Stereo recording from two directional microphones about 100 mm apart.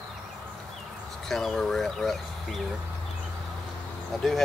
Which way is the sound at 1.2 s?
5° left (ahead or behind).